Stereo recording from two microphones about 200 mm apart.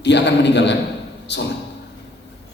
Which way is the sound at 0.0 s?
60° left (ahead or behind).